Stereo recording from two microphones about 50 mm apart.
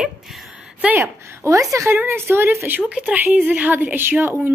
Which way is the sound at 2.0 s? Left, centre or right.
Right.